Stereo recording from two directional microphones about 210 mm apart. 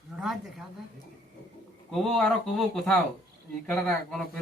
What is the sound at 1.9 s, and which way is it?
A man's voice, 5° left (ahead or behind).